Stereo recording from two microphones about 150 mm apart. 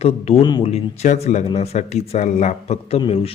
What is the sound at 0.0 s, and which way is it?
Speech, 45° left (ahead or behind).